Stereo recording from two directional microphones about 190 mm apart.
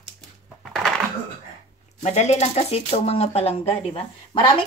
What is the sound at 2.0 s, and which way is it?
Speech, 35° left (ahead or behind).